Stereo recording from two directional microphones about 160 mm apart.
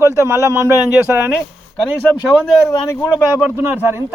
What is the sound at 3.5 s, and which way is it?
Speech, 15° right (ahead or behind).